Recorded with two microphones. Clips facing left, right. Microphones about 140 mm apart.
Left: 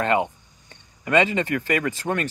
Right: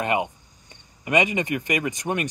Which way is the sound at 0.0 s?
15° right (ahead or behind).